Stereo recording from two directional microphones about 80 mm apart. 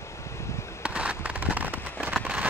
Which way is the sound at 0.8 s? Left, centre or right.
Centre.